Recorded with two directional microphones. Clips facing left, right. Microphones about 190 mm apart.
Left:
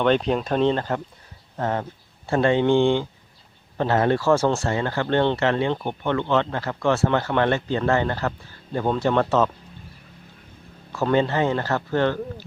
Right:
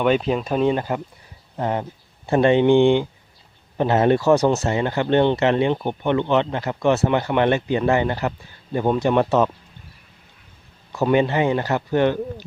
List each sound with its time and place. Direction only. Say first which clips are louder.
0.0 s speech: right 1 dB; 5° right (ahead or behind)
10.9 s speech: right 2 dB; 15° right (ahead or behind)